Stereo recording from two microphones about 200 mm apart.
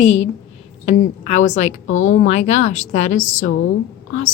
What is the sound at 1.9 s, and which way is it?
Speech, 90° left.